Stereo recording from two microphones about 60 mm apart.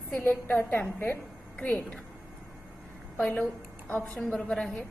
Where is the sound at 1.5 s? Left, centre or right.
Centre.